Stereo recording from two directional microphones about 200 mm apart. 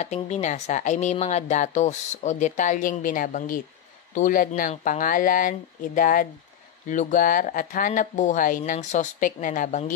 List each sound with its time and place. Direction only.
0.0 s a woman's voice: 35° left (ahead or behind)